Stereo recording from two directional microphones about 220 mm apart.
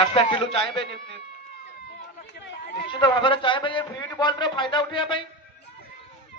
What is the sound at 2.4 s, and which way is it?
Chatter, 50° left (ahead or behind).